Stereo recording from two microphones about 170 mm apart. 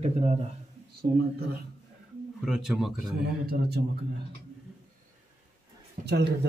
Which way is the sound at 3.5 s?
70° right (ahead or behind).